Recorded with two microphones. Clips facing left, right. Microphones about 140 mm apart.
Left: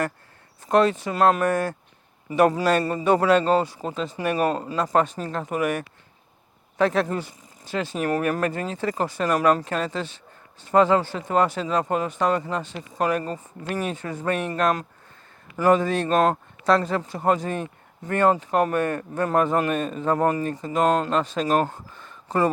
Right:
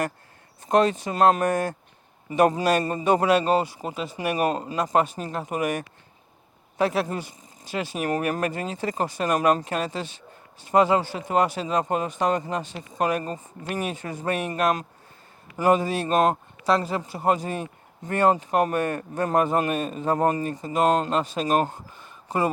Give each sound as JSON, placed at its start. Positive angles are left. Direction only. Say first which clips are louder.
{"t": 0.7, "sound": "speech", "louder": "left 1 dB", "side_deg": -20}
{"t": 16.6, "sound": "speech", "louder": "left 2 dB", "side_deg": -5}
{"t": 18.9, "sound": "a man's voice", "louder": "left 1 dB", "side_deg": -35}
{"t": 19.3, "sound": "speech", "louder": "left 1 dB", "side_deg": -15}